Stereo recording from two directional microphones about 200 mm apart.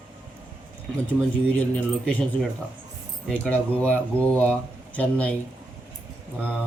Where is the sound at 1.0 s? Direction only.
5° left (ahead or behind).